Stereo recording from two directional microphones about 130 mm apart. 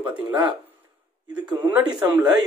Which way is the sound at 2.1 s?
30° right (ahead or behind).